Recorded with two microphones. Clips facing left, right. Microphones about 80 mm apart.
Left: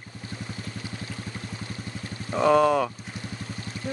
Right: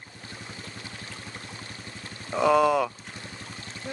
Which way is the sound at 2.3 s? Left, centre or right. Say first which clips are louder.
Left 1 dB; centre.